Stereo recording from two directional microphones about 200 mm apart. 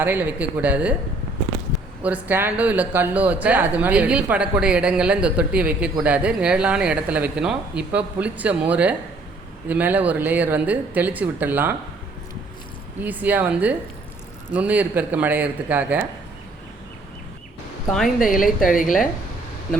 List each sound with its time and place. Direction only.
0.0 s speech: 10° right (ahead or behind)
2.0 s speech: 5° right (ahead or behind)
13.0 s speech: 10° right (ahead or behind)
17.9 s a woman's voice: centre (ahead or behind)
18.6 s speech: 45° left (ahead or behind)